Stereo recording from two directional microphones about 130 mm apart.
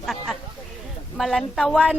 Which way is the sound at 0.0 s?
Centre (ahead or behind).